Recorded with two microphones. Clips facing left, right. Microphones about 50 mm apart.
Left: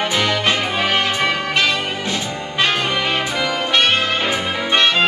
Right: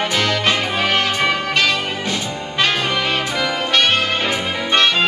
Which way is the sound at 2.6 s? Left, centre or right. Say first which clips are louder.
Even; centre.